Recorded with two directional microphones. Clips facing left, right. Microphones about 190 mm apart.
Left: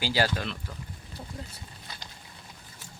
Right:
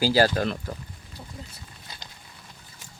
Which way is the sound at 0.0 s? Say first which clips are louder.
Right 7 dB; 40° right (ahead or behind).